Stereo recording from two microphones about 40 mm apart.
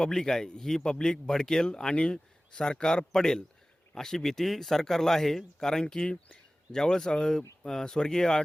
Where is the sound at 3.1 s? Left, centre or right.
Centre.